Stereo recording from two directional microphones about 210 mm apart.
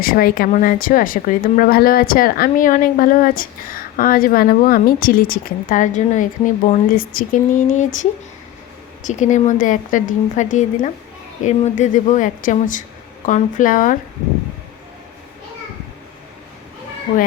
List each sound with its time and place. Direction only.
0.0 s a woman's voice: 45° left (ahead or behind)
9.0 s a woman's voice: 35° left (ahead or behind)